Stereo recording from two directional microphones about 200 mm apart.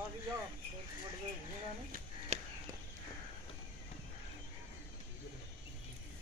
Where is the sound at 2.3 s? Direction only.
35° right (ahead or behind).